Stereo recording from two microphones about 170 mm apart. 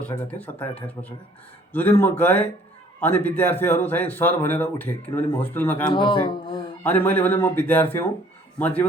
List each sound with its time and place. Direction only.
0.3 s speech: 10° left (ahead or behind)
1.7 s speech: 10° left (ahead or behind)
5.9 s speech: 30° left (ahead or behind)
6.8 s speech: 10° left (ahead or behind)